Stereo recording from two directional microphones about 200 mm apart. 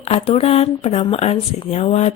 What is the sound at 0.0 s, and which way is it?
Speech, 30° left (ahead or behind).